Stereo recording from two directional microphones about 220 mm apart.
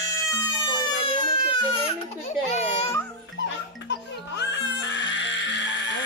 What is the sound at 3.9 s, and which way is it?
Music, 55° left (ahead or behind).